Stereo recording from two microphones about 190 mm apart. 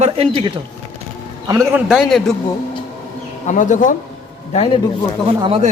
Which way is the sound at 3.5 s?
40° left (ahead or behind).